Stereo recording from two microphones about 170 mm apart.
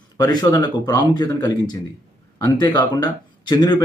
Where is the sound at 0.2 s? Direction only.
25° left (ahead or behind).